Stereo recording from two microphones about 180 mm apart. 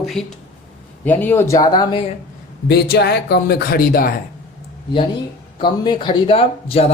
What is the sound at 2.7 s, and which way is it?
Speech, 60° left (ahead or behind).